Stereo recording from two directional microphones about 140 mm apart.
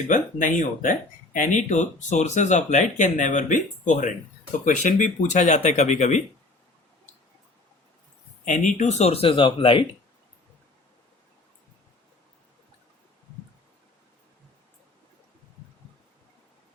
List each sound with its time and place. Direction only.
0.1 s speech: 65° left (ahead or behind)
8.4 s speech: 60° left (ahead or behind); by 9.8 s 35° left (ahead or behind)